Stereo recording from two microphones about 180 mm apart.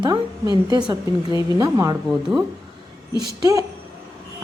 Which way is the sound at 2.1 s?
5° right (ahead or behind).